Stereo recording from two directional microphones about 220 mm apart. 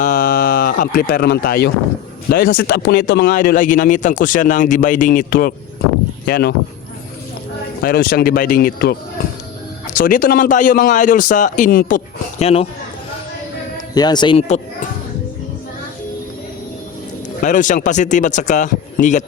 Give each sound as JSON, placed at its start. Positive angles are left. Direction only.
{"t": 0.0, "sound": "a sound", "side_deg": 35}
{"t": 2.3, "sound": "a man's voice", "side_deg": 40}
{"t": 7.8, "sound": "speech", "side_deg": 45}
{"t": 10.0, "sound": "a man's voice", "side_deg": 40}
{"t": 13.7, "sound": "speech", "side_deg": 20}
{"t": 17.4, "sound": "a man's voice", "side_deg": 35}